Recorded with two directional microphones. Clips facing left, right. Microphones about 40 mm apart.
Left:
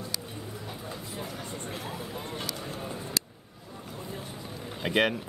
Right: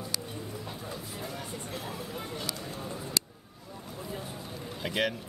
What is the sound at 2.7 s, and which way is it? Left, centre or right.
Vehicle, left.